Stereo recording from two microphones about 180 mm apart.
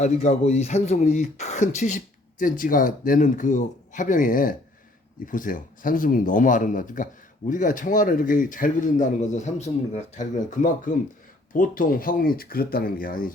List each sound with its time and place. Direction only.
0.0 s speech: 40° left (ahead or behind)